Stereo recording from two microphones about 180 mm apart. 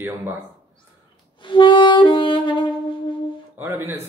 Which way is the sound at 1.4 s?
25° left (ahead or behind).